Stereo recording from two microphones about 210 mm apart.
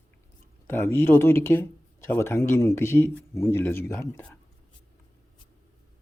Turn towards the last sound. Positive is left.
turn(degrees=10)  # may be behind; listen again after turning